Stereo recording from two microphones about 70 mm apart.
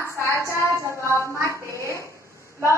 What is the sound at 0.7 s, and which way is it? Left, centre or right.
Speech, right.